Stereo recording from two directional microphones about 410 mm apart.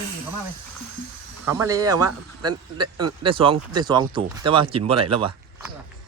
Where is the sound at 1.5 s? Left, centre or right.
Centre.